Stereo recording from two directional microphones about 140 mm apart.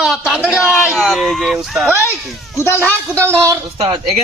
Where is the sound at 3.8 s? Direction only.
45° right (ahead or behind).